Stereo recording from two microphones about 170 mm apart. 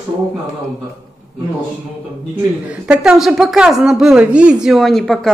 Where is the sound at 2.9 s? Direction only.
5° right (ahead or behind).